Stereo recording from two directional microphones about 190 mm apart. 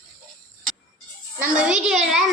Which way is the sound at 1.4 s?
5° right (ahead or behind).